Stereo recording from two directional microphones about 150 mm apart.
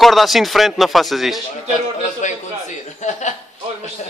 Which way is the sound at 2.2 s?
55° left (ahead or behind).